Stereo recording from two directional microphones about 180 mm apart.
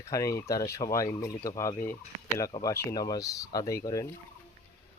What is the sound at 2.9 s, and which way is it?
Speech, 20° left (ahead or behind).